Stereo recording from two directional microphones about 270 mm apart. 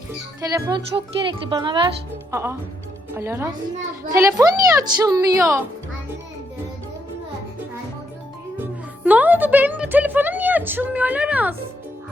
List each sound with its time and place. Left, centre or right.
0.4 s a woman's voice: centre
9.0 s a woman's voice: centre